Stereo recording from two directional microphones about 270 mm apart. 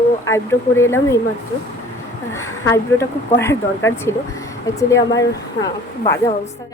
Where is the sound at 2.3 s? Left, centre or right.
Centre.